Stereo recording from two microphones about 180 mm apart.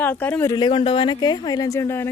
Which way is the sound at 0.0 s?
10° left (ahead or behind).